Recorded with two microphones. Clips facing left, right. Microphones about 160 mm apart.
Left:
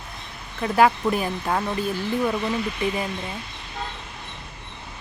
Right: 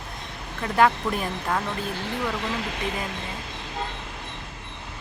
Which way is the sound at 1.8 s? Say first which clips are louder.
Left 5 dB; 70° right (ahead or behind).